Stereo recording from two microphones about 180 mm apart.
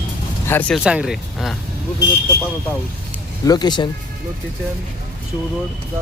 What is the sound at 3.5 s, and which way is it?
Speech, 25° left (ahead or behind).